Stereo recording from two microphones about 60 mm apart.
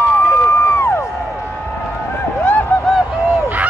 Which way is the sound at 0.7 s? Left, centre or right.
Left.